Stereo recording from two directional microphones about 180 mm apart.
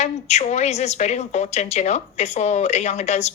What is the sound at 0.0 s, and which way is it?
Speech, 40° left (ahead or behind).